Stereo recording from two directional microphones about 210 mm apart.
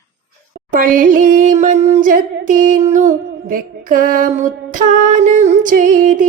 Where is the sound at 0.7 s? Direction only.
40° right (ahead or behind).